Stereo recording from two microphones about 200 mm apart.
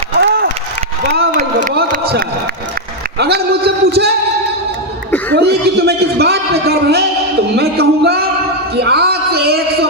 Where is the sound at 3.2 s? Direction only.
55° right (ahead or behind).